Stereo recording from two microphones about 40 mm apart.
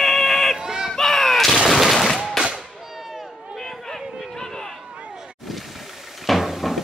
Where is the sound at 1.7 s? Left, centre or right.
Centre.